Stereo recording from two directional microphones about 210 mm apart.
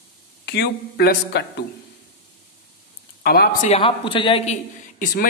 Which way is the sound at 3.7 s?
25° left (ahead or behind).